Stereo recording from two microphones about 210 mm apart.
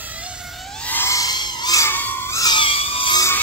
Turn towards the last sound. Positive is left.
turn(degrees=15)  # may be behind; listen again after turning